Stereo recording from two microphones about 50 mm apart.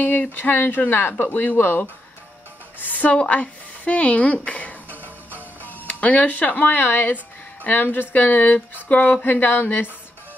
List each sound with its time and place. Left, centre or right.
0.0 s a woman's voice: left
5.0 s music: right
5.7 s speech: left